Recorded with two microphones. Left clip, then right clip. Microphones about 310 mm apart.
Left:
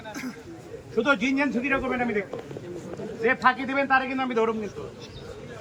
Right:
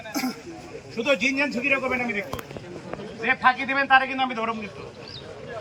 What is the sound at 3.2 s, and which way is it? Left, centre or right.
A man's voice, centre.